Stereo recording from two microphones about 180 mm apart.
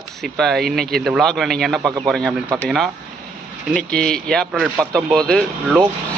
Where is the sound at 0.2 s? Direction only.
Centre (ahead or behind).